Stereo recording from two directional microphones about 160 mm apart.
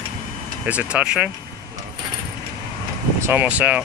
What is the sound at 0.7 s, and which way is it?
Speech, 10° right (ahead or behind).